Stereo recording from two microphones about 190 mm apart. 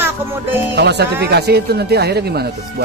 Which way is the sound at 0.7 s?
60° right (ahead or behind).